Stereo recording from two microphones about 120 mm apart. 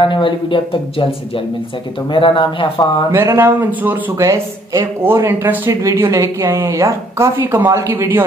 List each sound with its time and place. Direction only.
0.0 s speech: 45° left (ahead or behind)
3.1 s a woman's voice: 20° right (ahead or behind)